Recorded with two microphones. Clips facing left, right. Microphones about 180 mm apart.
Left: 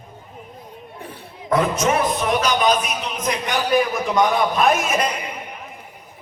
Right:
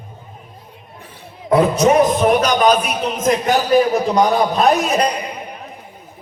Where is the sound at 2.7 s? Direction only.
55° right (ahead or behind).